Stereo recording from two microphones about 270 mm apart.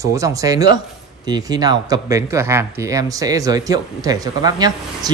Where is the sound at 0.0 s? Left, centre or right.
Centre.